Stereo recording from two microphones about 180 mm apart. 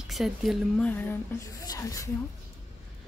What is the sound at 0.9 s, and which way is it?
Speech, 10° left (ahead or behind).